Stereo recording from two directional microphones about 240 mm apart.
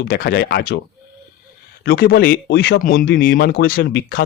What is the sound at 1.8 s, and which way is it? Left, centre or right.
Speech, left.